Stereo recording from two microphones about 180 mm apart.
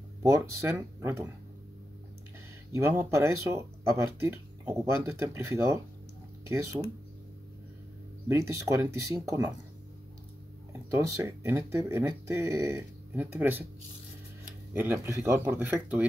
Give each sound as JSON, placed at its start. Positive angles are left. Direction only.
{"t": 0.2, "sound": "speech", "side_deg": -15}
{"t": 2.7, "sound": "speech", "side_deg": -15}
{"t": 8.3, "sound": "speech", "side_deg": -15}
{"t": 10.7, "sound": "speech", "side_deg": -15}
{"t": 14.7, "sound": "speech", "side_deg": -10}